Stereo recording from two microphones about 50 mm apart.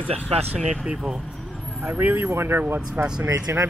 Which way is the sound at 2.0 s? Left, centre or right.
Right.